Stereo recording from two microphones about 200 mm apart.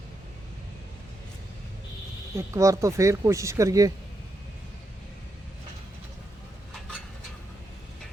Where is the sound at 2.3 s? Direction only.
15° right (ahead or behind).